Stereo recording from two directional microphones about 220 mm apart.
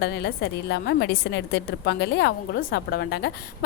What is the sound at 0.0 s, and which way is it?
A woman's voice, 50° left (ahead or behind).